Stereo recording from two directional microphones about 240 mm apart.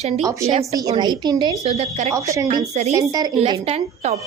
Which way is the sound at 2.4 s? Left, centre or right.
Right.